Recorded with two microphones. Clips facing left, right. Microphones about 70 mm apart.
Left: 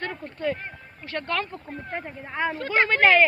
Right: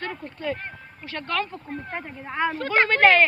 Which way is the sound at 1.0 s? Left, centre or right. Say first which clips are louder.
Even; left.